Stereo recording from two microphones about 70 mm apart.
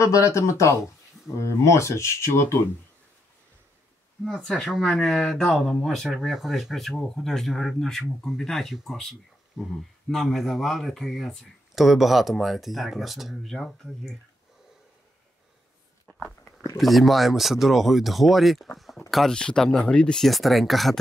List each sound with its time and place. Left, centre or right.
0.0 s speech: left
4.2 s speech: centre
16.7 s speech: centre
20.2 s speech: centre